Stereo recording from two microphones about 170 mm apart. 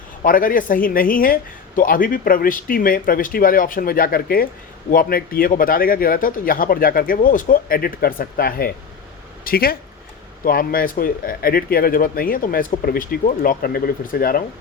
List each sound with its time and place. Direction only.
0.2 s speech: 55° left (ahead or behind)